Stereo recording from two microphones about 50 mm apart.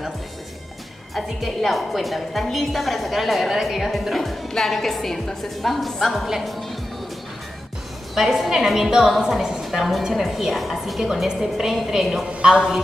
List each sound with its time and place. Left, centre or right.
1.1 s a woman's voice: centre
8.1 s a woman's voice: centre
12.3 s a woman's voice: right